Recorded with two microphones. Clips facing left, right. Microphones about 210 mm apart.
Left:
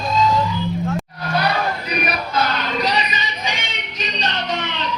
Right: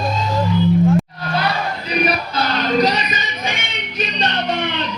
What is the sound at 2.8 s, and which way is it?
Music, 45° right (ahead or behind).